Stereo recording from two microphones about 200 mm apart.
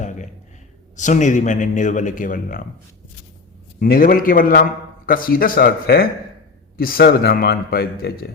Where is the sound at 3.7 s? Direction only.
50° left (ahead or behind).